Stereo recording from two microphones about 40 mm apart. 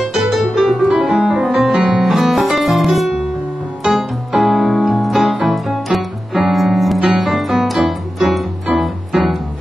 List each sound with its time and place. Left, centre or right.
0.2 s music: centre
0.8 s music: centre
3.8 s piano: centre
8.8 s music: centre